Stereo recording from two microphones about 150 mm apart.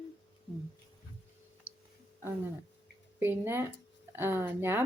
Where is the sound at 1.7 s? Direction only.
65° left (ahead or behind).